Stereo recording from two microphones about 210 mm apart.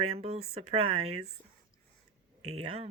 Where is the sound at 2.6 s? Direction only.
30° right (ahead or behind).